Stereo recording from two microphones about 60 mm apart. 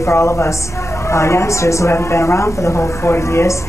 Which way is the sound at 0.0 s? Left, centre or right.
Left.